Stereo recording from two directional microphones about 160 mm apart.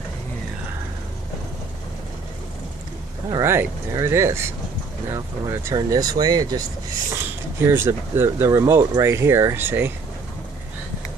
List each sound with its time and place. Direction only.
3.3 s speech: 20° right (ahead or behind)